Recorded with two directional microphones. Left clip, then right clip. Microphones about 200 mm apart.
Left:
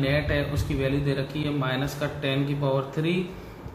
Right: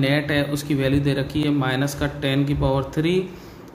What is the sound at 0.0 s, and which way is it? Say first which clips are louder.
A man's voice: right 4 dB; 55° right (ahead or behind).